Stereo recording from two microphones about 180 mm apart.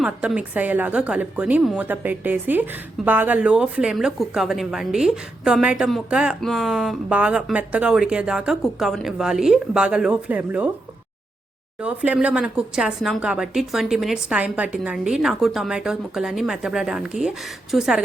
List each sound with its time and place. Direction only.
0.0 s a woman's voice: 5° right (ahead or behind)
11.8 s a woman's voice: 5° right (ahead or behind)